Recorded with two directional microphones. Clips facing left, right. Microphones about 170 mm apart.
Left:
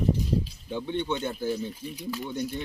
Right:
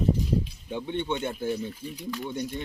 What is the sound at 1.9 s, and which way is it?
Speech, 5° left (ahead or behind).